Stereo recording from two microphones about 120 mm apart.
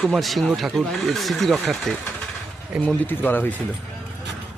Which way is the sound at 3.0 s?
15° left (ahead or behind).